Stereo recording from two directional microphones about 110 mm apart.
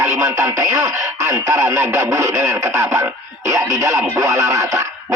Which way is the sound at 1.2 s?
30° right (ahead or behind).